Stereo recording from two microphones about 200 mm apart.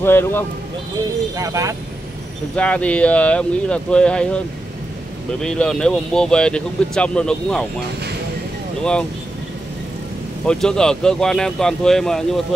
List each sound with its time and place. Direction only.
0.0 s speech: 10° left (ahead or behind)
1.3 s speech: 15° right (ahead or behind)
2.5 s speech: 5° left (ahead or behind)
5.4 s speech: 5° left (ahead or behind)
10.4 s speech: 5° left (ahead or behind)